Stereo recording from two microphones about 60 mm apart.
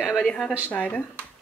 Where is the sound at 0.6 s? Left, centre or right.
Left.